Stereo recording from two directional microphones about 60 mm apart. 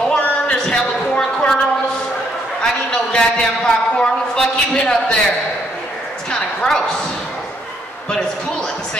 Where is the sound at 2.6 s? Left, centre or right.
Centre.